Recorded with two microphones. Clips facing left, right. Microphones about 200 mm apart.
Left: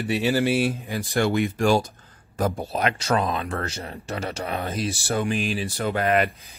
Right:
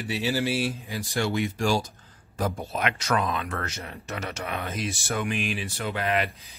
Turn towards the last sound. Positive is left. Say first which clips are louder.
# left 5 dB
turn(degrees=50)  # may be behind; listen again after turning